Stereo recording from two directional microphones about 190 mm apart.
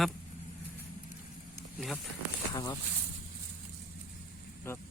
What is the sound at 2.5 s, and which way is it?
Speech, 20° left (ahead or behind).